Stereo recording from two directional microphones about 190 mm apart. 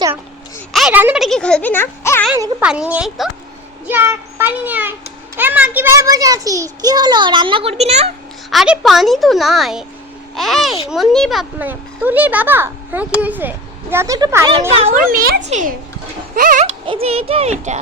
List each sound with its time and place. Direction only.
0.7 s speech: centre (ahead or behind)
2.3 s a child's voice: 10° right (ahead or behind); by 8.1 s 35° right (ahead or behind)
8.4 s a child's voice: 5° right (ahead or behind)
14.7 s speech: 30° right (ahead or behind)
15.1 s a sound: 50° right (ahead or behind)
15.4 s speech: 40° right (ahead or behind)
16.3 s a sound: 45° right (ahead or behind)
16.8 s speech: 30° right (ahead or behind)